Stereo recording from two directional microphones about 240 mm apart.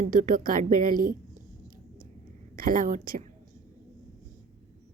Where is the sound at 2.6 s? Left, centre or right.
Right.